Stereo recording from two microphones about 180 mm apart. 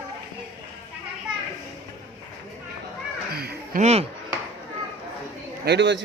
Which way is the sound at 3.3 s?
60° right (ahead or behind).